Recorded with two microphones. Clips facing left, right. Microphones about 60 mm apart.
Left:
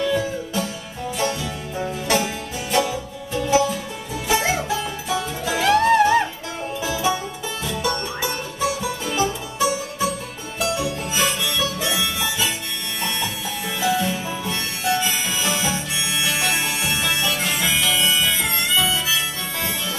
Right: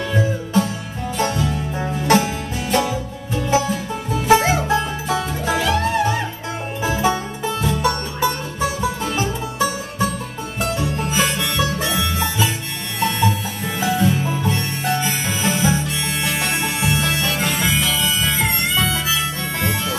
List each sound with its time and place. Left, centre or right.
0.0 s music: right
1.8 s music: right
4.3 s music: right
5.6 s music: left
6.8 s music: right
13.7 s music: right
18.3 s harmonica: right